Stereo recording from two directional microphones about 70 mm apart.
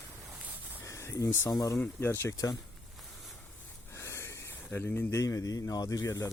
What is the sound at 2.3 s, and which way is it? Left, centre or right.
Speech, left.